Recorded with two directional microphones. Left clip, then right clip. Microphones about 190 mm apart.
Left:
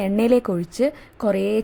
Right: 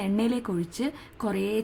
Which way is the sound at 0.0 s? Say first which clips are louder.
Left 10 dB; 25° left (ahead or behind).